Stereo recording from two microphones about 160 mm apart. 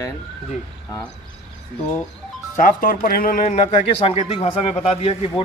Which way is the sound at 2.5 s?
55° left (ahead or behind).